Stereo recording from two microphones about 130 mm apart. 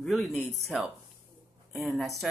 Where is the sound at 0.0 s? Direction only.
Centre (ahead or behind).